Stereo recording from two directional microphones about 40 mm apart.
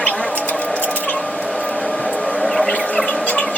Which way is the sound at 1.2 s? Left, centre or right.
Centre.